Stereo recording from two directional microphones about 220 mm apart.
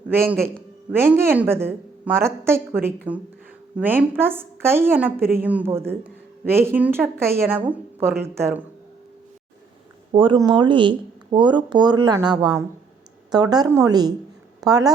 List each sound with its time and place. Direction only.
0.9 s a woman's voice: 10° right (ahead or behind)
10.1 s a woman's voice: 25° right (ahead or behind)